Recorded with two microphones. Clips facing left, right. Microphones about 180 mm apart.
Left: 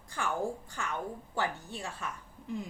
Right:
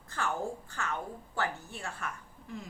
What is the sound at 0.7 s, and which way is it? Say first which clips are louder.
A woman's voice: even; 15° left (ahead or behind).